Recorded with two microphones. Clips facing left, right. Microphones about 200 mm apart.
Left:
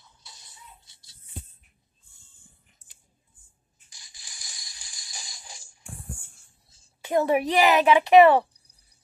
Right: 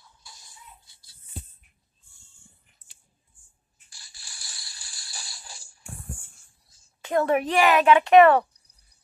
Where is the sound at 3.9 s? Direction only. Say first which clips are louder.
Right 1 dB; 20° left (ahead or behind).